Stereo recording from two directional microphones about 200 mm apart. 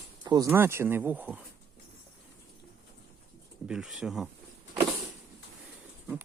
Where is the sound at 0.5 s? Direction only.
10° right (ahead or behind).